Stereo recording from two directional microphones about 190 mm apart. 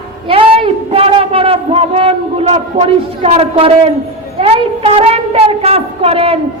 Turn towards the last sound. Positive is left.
turn(degrees=-30)  # may be behind; listen again after turning